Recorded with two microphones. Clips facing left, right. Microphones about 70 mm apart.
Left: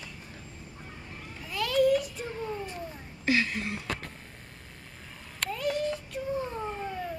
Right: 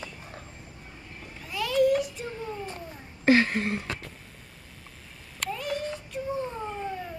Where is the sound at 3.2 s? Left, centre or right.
Right.